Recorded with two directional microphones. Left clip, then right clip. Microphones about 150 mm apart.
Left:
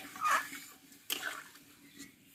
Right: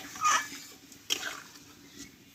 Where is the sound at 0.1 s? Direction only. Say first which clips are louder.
Right 4 dB; 15° left (ahead or behind).